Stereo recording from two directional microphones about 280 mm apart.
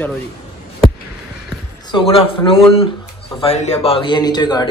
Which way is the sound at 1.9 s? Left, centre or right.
Centre.